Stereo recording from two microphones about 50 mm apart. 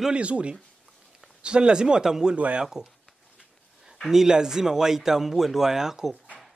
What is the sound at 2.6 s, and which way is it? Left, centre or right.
Speech, centre.